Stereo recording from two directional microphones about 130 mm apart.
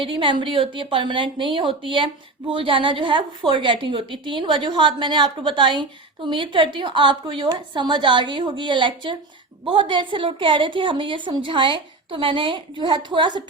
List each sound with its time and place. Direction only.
0.0 s a woman's voice: 40° right (ahead or behind)